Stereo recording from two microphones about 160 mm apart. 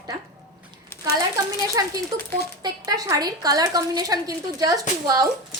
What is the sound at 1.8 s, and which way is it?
Speech, 25° right (ahead or behind).